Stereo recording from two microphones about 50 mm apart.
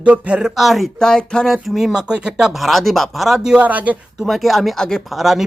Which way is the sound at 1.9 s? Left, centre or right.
Centre.